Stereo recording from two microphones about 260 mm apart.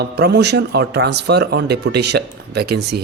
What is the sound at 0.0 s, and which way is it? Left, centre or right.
Speech, right.